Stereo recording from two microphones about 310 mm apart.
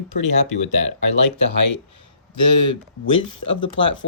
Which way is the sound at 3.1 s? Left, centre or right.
Left.